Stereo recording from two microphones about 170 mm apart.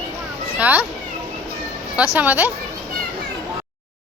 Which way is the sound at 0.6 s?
10° right (ahead or behind).